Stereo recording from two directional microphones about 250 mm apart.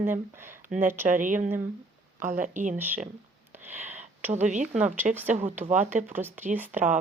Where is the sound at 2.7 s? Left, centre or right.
Centre.